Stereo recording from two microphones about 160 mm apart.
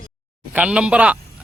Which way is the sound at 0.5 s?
5° right (ahead or behind).